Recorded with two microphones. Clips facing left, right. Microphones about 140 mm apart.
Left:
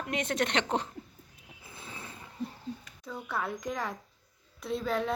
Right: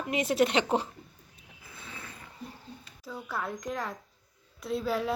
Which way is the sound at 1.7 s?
25° left (ahead or behind).